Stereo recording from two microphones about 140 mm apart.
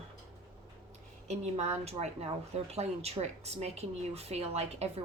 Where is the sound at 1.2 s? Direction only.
55° right (ahead or behind).